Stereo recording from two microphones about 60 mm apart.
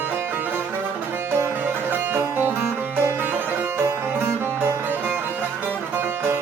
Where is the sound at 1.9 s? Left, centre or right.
Right.